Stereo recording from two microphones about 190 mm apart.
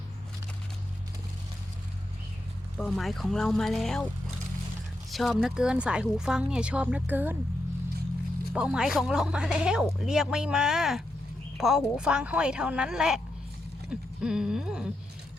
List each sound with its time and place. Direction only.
2.7 s speech: centre (ahead or behind)
5.1 s speech: centre (ahead or behind)
8.5 s speech: 5° right (ahead or behind)
13.9 s a sound: 5° right (ahead or behind)